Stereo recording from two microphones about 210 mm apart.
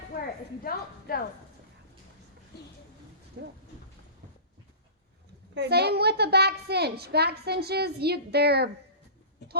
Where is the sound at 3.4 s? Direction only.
55° right (ahead or behind).